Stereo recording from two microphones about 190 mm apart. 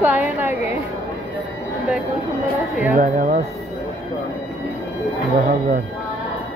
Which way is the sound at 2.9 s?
40° right (ahead or behind).